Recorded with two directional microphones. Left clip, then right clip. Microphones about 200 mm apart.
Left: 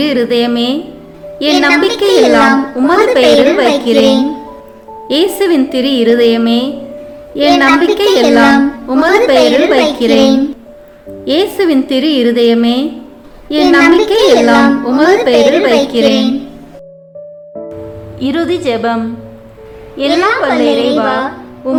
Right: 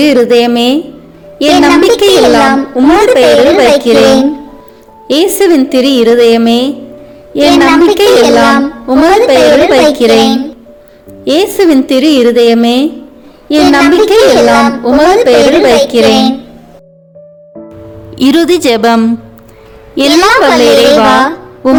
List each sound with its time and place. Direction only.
0.0 s speech: 35° right (ahead or behind)
5.0 s speech: 35° right (ahead or behind)
11.3 s speech: 35° right (ahead or behind)
18.2 s a woman's voice: 55° right (ahead or behind)